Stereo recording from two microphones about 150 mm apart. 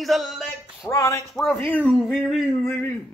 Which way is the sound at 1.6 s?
10° left (ahead or behind).